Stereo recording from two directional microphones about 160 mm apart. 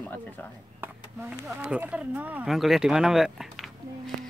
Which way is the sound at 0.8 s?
15° right (ahead or behind).